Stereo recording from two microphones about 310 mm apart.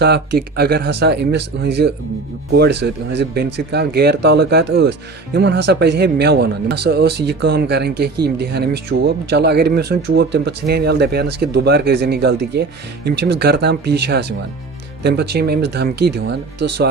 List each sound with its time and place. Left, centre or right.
0.0 s speech: right